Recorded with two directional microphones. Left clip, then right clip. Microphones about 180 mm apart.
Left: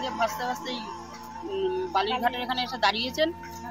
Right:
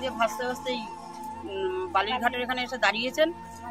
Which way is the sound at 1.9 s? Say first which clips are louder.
Right 1 dB; 10° right (ahead or behind).